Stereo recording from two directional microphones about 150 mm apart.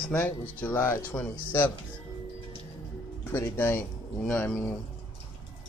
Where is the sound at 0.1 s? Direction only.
10° left (ahead or behind).